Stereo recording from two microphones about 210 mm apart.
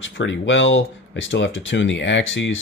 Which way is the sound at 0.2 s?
60° left (ahead or behind).